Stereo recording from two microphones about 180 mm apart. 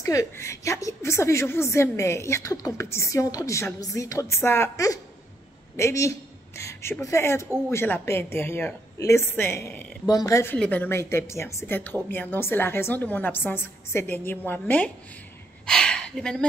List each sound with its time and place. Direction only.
0.0 s a woman's voice: 20° left (ahead or behind)